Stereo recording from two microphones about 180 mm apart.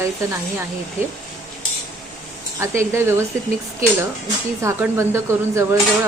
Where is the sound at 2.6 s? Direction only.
15° right (ahead or behind).